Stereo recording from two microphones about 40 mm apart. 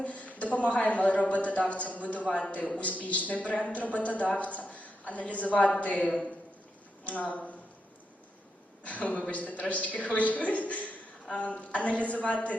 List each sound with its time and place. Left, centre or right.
0.0 s a woman's voice: left
8.8 s a woman's voice: left